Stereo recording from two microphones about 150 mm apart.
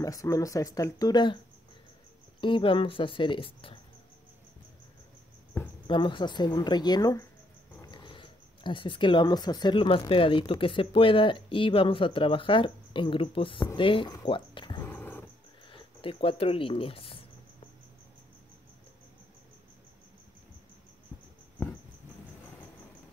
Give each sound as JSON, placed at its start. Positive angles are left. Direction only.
{"t": 0.0, "sound": "speech", "side_deg": 20}
{"t": 2.4, "sound": "speech", "side_deg": 35}
{"t": 5.5, "sound": "cricket", "side_deg": 15}
{"t": 5.9, "sound": "speech", "side_deg": 35}
{"t": 14.2, "sound": "a sound", "side_deg": 35}
{"t": 14.9, "sound": "wild animals", "side_deg": 15}
{"t": 15.7, "sound": "speech", "side_deg": 35}